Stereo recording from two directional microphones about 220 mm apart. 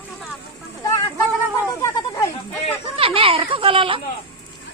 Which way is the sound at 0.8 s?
15° left (ahead or behind).